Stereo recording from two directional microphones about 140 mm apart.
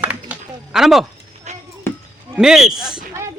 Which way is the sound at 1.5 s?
55° right (ahead or behind).